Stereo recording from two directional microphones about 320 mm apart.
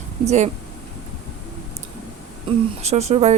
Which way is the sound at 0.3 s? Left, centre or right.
Right.